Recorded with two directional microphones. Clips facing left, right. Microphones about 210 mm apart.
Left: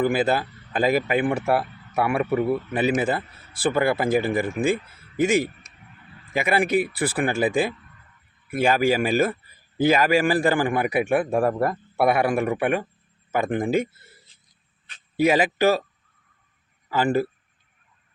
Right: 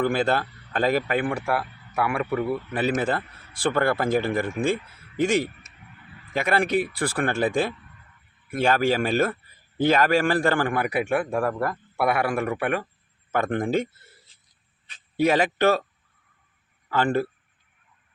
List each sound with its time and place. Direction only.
0.0 s speech: 5° left (ahead or behind)
1.3 s a man's voice: 25° left (ahead or behind)
13.3 s speech: 5° left (ahead or behind)
15.1 s speech: 10° left (ahead or behind)
16.9 s speech: 10° left (ahead or behind)